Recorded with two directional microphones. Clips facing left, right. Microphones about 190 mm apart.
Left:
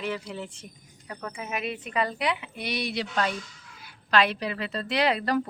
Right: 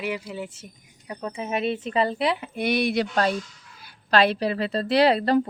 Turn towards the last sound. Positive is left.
turn(degrees=-30)  # may be behind; listen again after turning